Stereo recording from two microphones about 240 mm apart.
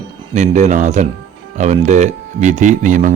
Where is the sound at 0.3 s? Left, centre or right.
Right.